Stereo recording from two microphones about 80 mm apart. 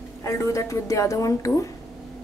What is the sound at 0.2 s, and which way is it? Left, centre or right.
A woman's voice, left.